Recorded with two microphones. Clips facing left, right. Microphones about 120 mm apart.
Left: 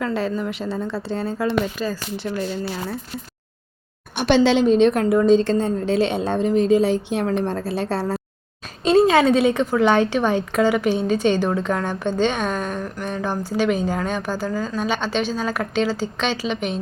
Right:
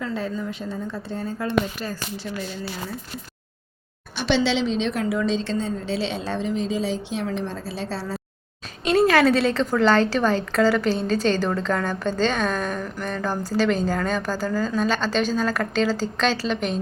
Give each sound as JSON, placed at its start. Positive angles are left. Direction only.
{"t": 0.0, "sound": "a woman's voice", "side_deg": 75}
{"t": 4.2, "sound": "a woman's voice", "side_deg": 50}
{"t": 8.8, "sound": "a woman's voice", "side_deg": 30}